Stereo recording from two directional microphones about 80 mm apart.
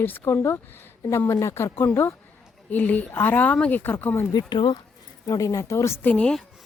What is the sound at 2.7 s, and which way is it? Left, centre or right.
A woman's voice, left.